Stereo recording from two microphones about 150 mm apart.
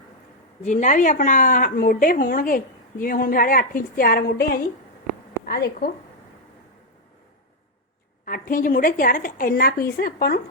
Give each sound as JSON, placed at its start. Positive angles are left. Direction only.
{"t": 0.6, "sound": "a woman's voice", "side_deg": 55}
{"t": 8.2, "sound": "a woman's voice", "side_deg": 65}